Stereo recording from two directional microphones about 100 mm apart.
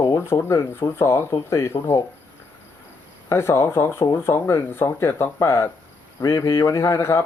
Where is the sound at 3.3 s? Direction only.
25° left (ahead or behind).